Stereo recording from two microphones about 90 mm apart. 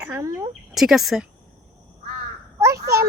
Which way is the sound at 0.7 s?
5° right (ahead or behind).